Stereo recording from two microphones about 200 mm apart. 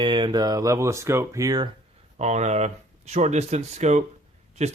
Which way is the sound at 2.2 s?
35° right (ahead or behind).